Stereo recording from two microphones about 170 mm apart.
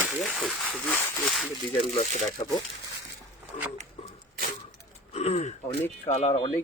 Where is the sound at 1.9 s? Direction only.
40° left (ahead or behind).